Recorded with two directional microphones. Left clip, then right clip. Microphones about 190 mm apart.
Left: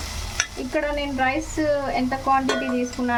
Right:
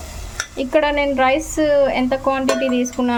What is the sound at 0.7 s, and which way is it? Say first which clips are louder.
Speech: right 9 dB; 45° right (ahead or behind).